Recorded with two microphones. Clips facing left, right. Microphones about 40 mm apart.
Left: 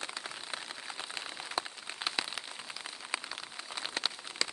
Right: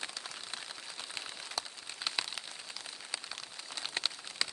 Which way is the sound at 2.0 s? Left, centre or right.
Centre.